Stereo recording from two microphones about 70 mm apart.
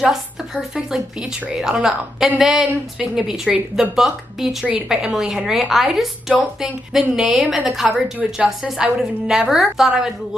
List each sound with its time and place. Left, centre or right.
0.0 s a woman's voice: centre
7.9 s a woman's voice: right
8.5 s a woman's voice: centre